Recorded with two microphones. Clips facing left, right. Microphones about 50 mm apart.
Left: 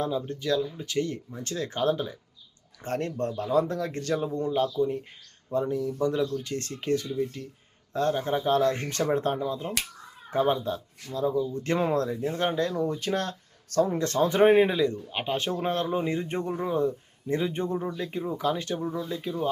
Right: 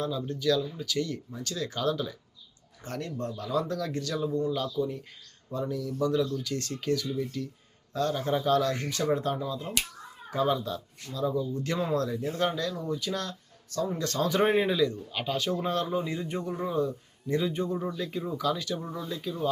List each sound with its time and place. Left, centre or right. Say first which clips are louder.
0.0 s speech: even; left
13.9 s speech: left 3 dB; left
18.8 s speech: left 5 dB; centre
19.1 s speech: left 2 dB; left